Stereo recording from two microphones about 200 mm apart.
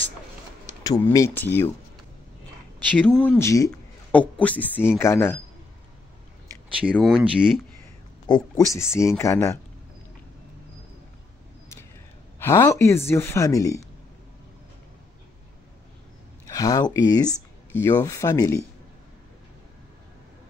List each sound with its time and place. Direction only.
0.8 s a woman's voice: 15° left (ahead or behind)
3.2 s a woman's voice: 10° left (ahead or behind)
7.0 s speech: centre (ahead or behind)
8.3 s a woman's voice: 15° left (ahead or behind)
12.4 s a woman's voice: 15° left (ahead or behind)
16.4 s speech: 15° left (ahead or behind)